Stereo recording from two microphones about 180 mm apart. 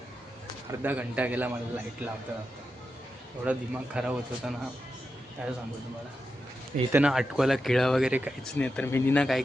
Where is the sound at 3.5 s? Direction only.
10° right (ahead or behind).